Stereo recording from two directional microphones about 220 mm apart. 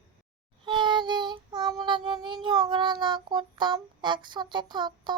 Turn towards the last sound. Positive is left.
turn(degrees=-20)  # may be behind; listen again after turning